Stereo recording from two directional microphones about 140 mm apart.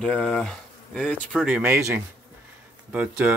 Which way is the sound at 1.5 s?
15° right (ahead or behind).